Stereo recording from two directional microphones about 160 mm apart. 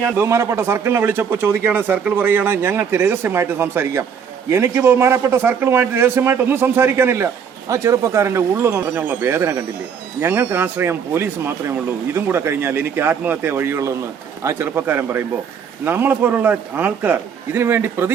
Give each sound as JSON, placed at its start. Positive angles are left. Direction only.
{"t": 0.2, "sound": "a man's voice", "side_deg": -15}